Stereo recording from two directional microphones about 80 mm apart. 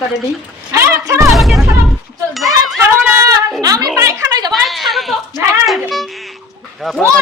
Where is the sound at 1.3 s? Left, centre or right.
Centre.